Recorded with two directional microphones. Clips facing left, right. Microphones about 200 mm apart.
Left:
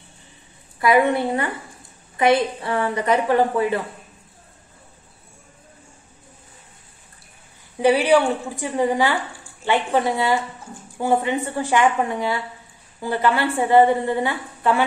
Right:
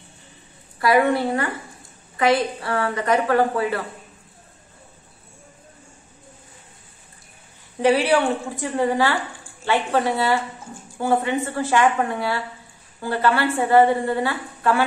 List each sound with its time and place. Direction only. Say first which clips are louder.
0.7 s a woman's voice: left 1 dB; 20° left (ahead or behind)
7.8 s a woman's voice: left 2 dB; 15° left (ahead or behind)